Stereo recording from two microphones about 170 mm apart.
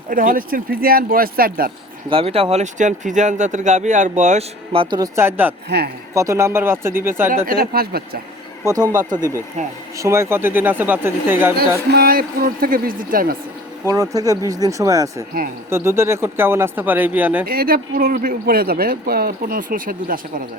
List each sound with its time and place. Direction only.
0.1 s speech: 55° right (ahead or behind)
2.0 s speech: 35° right (ahead or behind)
5.1 s speech: 10° right (ahead or behind)
5.6 s speech: 70° right (ahead or behind)
6.1 s speech: 15° right (ahead or behind)
7.4 s speech: 60° right (ahead or behind)
8.6 s speech: 20° right (ahead or behind)
11.9 s speech: 65° right (ahead or behind)
13.8 s speech: 20° right (ahead or behind)
17.4 s speech: 60° right (ahead or behind)